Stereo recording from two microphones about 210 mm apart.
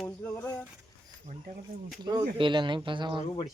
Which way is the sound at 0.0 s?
5° left (ahead or behind).